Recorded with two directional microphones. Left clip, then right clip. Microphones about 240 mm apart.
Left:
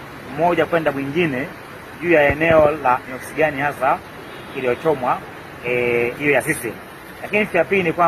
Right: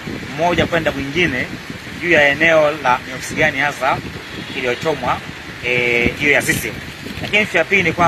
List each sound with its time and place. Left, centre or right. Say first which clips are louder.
0.4 s speech: right 1 dB; centre